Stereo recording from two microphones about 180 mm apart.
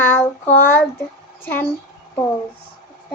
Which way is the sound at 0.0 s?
10° left (ahead or behind).